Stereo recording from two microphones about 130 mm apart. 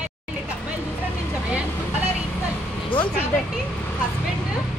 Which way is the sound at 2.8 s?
40° left (ahead or behind).